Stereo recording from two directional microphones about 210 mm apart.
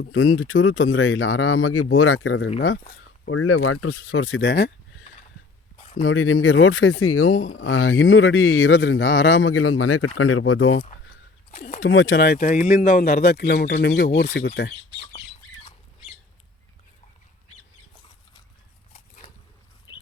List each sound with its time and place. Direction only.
0.1 s speech: 75° left (ahead or behind)
3.2 s speech: 85° left; by 5.0 s 55° left (ahead or behind)
6.0 s speech: 80° left
7.5 s speech: 75° left (ahead or behind)
11.5 s speech: 35° left (ahead or behind)
11.8 s speech: 60° left (ahead or behind)
18.9 s a sound: 35° left (ahead or behind)
19.9 s a sound: 20° left (ahead or behind)